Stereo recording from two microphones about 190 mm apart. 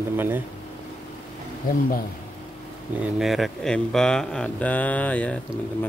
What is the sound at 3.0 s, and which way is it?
Speech, centre (ahead or behind).